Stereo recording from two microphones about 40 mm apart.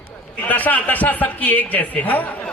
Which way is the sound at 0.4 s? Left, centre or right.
Left.